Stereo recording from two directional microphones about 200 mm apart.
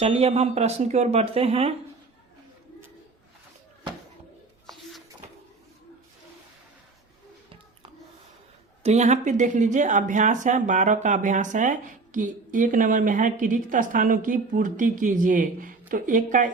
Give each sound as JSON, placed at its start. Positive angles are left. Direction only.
{"t": 0.0, "sound": "speech", "side_deg": -30}
{"t": 8.8, "sound": "speech", "side_deg": -35}